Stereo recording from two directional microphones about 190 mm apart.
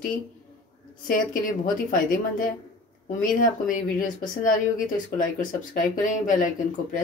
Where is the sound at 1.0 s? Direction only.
45° left (ahead or behind).